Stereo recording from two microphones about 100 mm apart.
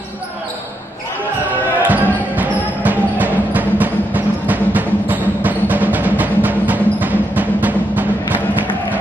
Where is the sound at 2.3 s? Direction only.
15° right (ahead or behind).